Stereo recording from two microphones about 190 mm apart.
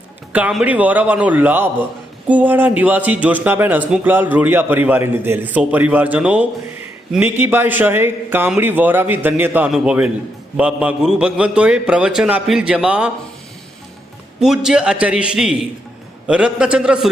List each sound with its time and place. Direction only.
0.3 s a man's voice: 10° right (ahead or behind)
14.4 s a man's voice: 5° right (ahead or behind)